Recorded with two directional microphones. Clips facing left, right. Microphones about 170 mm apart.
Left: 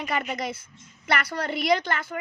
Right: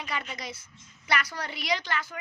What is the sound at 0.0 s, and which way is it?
A woman's voice, 50° left (ahead or behind).